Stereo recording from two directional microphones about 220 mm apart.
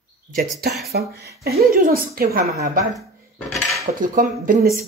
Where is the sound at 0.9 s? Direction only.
45° right (ahead or behind).